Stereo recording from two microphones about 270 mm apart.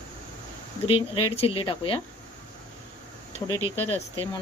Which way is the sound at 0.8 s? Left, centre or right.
Left.